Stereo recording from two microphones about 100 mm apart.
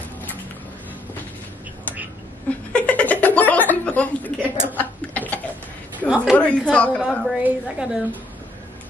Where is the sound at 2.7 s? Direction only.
15° left (ahead or behind).